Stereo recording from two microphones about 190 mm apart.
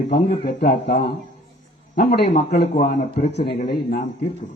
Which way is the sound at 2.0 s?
50° left (ahead or behind).